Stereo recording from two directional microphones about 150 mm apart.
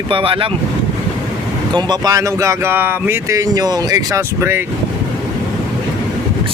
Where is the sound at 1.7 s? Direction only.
30° right (ahead or behind).